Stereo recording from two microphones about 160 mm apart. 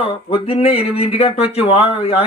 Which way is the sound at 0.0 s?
35° left (ahead or behind).